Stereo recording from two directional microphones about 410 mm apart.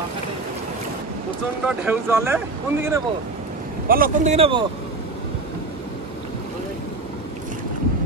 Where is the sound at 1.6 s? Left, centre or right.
Centre.